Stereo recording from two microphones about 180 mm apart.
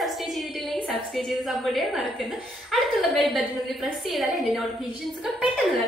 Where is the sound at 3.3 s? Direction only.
Centre (ahead or behind).